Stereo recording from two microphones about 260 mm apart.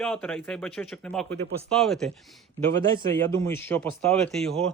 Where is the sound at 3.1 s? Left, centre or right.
Centre.